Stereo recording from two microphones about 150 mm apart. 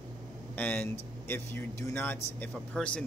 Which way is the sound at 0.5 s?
10° left (ahead or behind).